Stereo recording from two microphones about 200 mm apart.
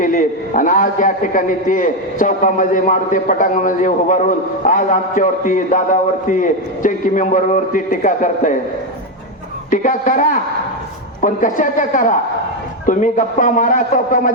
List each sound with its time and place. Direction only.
0.0 s a man's voice: 40° left (ahead or behind)
9.6 s a man's voice: 40° left (ahead or behind)